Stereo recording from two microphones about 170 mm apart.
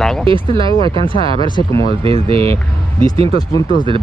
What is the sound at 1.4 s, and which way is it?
Speech, 25° left (ahead or behind).